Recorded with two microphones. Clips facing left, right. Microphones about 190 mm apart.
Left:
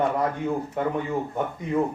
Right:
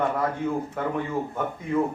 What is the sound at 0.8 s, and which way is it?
Speech, 20° left (ahead or behind).